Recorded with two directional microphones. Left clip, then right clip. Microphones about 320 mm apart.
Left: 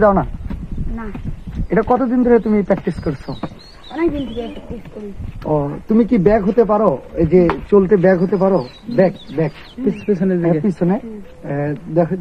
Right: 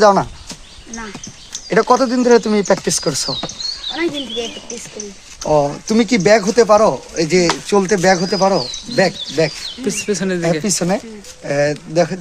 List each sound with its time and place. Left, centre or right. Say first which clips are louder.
0.0 s speech: right 2 dB; right
1.7 s speech: right 3 dB; right
3.9 s speech: left 4 dB; centre
5.5 s speech: right 4 dB; right
10.1 s speech: left 2 dB; centre
10.4 s speech: even; right